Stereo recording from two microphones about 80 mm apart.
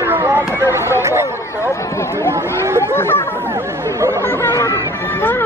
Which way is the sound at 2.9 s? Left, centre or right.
Left.